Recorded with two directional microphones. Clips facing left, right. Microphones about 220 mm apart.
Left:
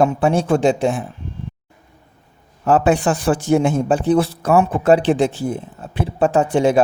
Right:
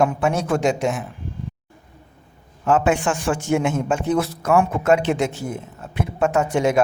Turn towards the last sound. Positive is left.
turn(degrees=30)  # may be behind; listen again after turning